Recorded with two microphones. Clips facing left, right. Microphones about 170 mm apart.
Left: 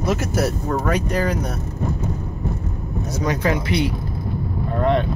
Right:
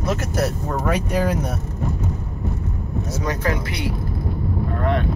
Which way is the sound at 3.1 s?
15° left (ahead or behind).